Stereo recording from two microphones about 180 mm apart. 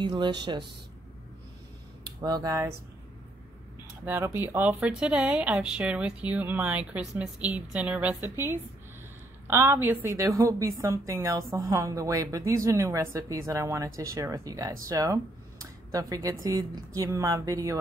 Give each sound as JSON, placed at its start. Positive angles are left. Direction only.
{"t": 0.0, "sound": "speech", "side_deg": -25}
{"t": 2.2, "sound": "speech", "side_deg": -20}
{"t": 4.0, "sound": "a woman's voice", "side_deg": -15}